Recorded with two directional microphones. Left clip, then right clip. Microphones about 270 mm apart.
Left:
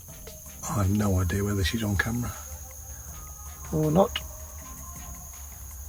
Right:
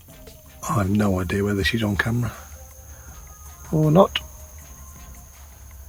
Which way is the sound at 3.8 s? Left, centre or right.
Right.